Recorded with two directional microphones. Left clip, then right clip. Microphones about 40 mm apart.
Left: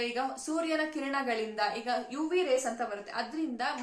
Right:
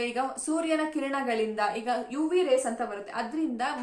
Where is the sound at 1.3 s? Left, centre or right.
Right.